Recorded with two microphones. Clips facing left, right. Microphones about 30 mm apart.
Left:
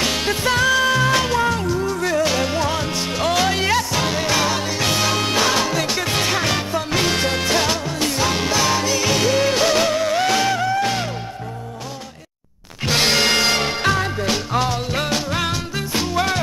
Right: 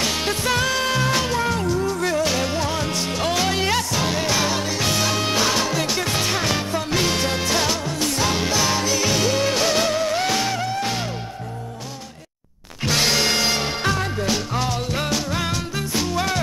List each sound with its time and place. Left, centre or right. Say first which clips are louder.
0.0 s music: left 2 dB; centre
0.6 s music: left 5 dB; centre
1.1 s music: left 3 dB; centre
12.8 s music: left 2 dB; centre